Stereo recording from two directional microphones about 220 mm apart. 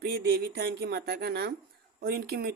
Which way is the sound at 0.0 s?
45° right (ahead or behind).